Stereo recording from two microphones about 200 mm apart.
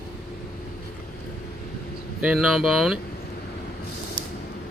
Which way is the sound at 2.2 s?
5° right (ahead or behind).